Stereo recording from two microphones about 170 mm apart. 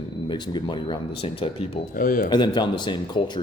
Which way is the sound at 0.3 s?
25° left (ahead or behind).